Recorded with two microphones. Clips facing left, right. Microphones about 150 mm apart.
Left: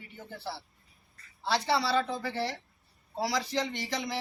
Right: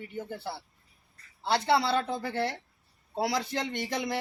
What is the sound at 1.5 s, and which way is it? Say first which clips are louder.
A man's voice: right 2 dB; 55° right (ahead or behind).